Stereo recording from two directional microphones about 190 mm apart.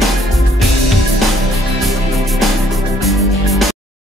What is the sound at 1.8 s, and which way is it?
Music, centre (ahead or behind).